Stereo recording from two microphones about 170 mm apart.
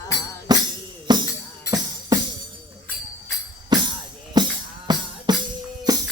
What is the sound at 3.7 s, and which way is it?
Music, 25° right (ahead or behind).